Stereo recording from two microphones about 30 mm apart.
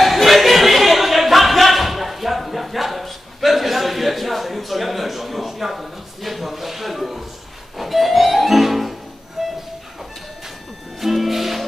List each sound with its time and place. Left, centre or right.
0.0 s a sound: centre
7.8 s music: centre
9.4 s train: centre
11.0 s music: centre